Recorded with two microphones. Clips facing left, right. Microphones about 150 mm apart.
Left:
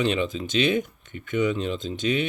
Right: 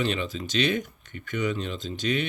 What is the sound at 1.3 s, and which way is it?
Speech, 45° right (ahead or behind).